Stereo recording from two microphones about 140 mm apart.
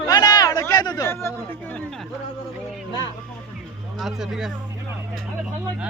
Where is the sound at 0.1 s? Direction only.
30° left (ahead or behind).